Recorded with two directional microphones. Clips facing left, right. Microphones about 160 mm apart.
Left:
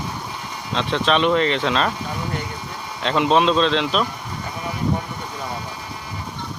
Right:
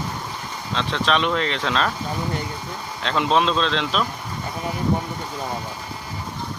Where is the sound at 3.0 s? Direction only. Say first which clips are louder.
Left 3 dB; centre (ahead or behind).